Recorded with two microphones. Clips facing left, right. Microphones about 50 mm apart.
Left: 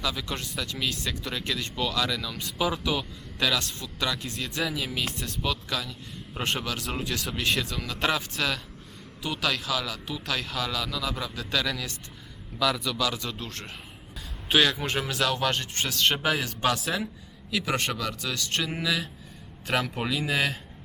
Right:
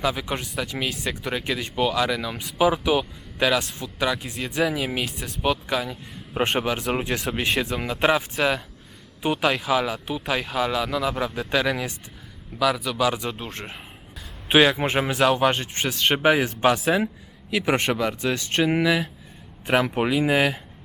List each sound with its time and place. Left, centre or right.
0.0 s speech: right
12.5 s speech: centre